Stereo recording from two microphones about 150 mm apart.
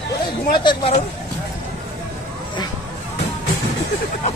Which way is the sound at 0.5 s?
30° left (ahead or behind).